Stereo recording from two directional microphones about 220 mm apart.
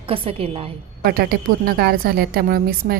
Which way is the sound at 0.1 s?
25° right (ahead or behind).